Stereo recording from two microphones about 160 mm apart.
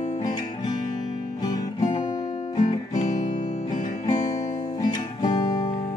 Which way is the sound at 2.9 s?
50° left (ahead or behind).